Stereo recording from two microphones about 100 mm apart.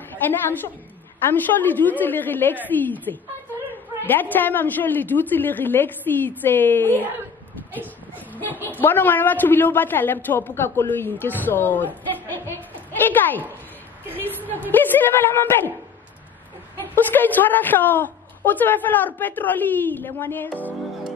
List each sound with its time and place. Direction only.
0.1 s a woman's voice: 20° left (ahead or behind)
8.5 s a woman's voice: 20° right (ahead or behind)
8.8 s a woman's voice: 20° left (ahead or behind)
14.0 s a sound: 20° right (ahead or behind)
14.7 s a woman's voice: 20° left (ahead or behind)
16.9 s a woman's voice: 20° left (ahead or behind)